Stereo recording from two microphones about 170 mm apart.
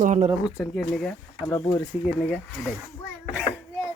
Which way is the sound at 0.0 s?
45° right (ahead or behind).